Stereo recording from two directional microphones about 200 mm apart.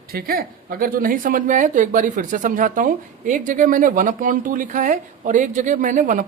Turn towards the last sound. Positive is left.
turn(degrees=-40)  # may be behind; listen again after turning